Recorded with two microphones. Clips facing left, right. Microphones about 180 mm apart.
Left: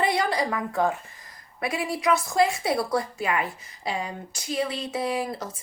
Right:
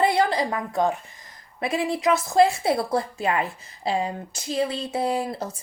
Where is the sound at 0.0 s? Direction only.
25° right (ahead or behind).